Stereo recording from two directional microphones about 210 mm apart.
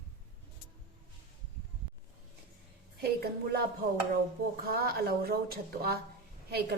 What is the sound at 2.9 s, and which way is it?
Speech, 45° right (ahead or behind).